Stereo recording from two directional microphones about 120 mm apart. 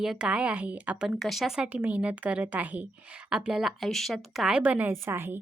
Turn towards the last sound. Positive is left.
turn(degrees=-20)  # may be behind; listen again after turning